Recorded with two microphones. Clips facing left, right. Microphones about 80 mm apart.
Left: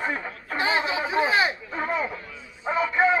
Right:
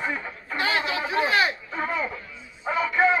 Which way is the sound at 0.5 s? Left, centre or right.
Left.